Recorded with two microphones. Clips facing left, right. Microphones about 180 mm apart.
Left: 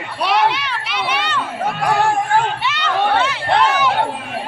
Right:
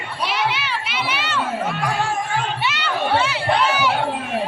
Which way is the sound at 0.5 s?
5° right (ahead or behind).